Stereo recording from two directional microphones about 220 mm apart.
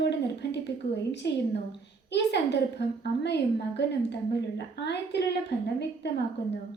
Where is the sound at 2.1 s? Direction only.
50° left (ahead or behind).